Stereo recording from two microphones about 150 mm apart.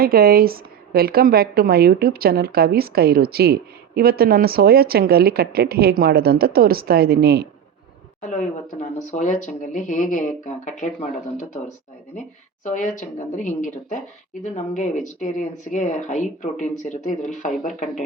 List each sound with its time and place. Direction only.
0.0 s a woman's voice: 90° right
8.8 s speech: 55° left (ahead or behind)
12.6 s speech: 55° left (ahead or behind)